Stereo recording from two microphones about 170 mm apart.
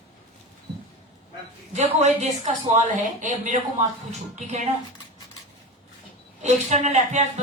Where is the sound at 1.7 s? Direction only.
40° right (ahead or behind).